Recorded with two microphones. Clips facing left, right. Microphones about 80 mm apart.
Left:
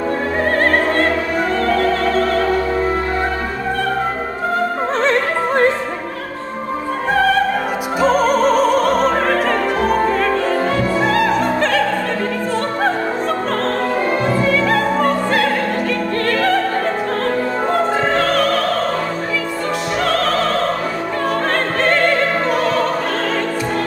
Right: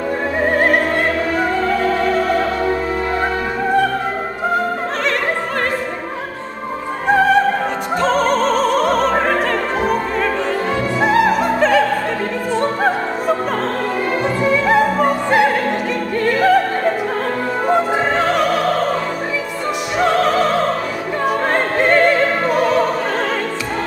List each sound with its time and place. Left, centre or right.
0.6 s opera: centre
8.0 s opera: centre
11.3 s opera: centre
14.2 s opera: centre
17.6 s music: centre
20.0 s opera: centre
21.7 s opera: centre